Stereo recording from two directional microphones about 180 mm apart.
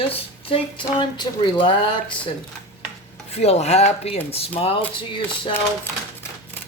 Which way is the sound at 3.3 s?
35° left (ahead or behind).